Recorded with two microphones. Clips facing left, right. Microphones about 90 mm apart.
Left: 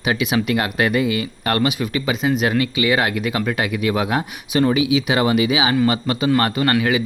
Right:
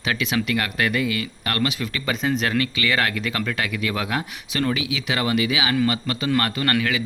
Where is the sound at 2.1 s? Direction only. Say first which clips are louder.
Left 3 dB; 5° left (ahead or behind).